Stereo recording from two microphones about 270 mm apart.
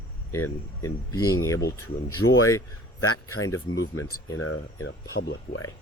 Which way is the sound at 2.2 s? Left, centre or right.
Left.